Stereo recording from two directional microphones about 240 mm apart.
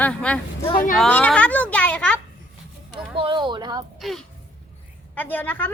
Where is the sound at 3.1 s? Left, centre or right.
Right.